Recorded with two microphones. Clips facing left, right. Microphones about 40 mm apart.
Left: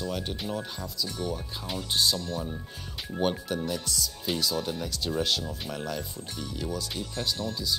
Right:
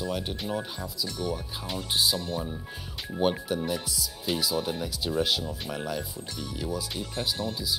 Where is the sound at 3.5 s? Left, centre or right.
Centre.